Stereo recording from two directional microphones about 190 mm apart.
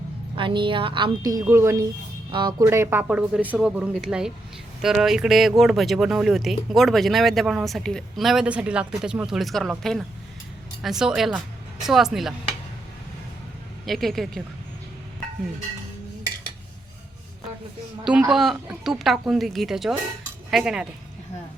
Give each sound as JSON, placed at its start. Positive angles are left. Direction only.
{"t": 0.3, "sound": "a woman's voice", "side_deg": -25}
{"t": 2.6, "sound": "speech", "side_deg": -10}
{"t": 13.8, "sound": "speech", "side_deg": 0}
{"t": 18.0, "sound": "speech", "side_deg": -5}